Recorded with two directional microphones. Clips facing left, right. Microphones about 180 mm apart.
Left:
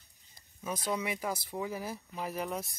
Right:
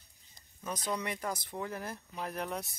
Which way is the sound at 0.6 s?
5° left (ahead or behind).